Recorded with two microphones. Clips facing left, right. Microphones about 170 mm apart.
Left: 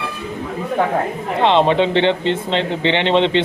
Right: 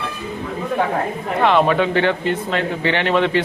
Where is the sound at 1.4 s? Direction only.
25° left (ahead or behind).